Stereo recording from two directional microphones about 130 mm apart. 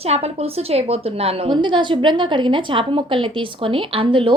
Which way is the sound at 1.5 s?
40° right (ahead or behind).